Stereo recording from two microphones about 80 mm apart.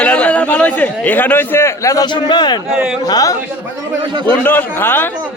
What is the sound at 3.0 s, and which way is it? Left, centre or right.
Speech, left.